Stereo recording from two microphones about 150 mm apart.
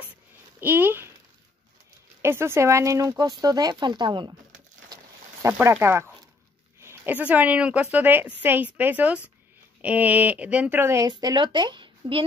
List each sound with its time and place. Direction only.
0.6 s a woman's voice: 15° right (ahead or behind)
2.2 s speech: 15° right (ahead or behind); by 4.4 s 30° right (ahead or behind)
4.8 s a sound: 25° right (ahead or behind)
5.5 s a woman's voice: 15° right (ahead or behind); by 12.3 s 35° right (ahead or behind)